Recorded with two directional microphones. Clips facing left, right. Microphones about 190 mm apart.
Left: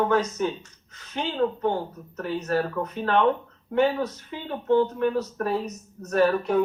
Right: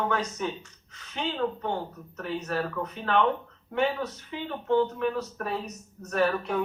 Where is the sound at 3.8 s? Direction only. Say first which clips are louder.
Left 1 dB; 40° left (ahead or behind).